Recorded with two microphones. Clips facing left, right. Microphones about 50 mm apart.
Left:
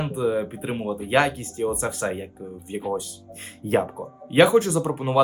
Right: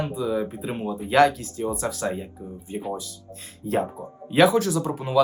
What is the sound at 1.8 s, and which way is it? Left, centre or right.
Speech, left.